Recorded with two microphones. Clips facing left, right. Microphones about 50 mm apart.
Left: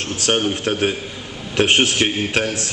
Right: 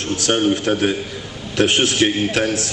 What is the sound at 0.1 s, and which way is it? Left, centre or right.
Speech, left.